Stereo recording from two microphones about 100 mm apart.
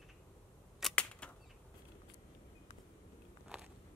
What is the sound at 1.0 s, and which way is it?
Bird flight, 10° left (ahead or behind).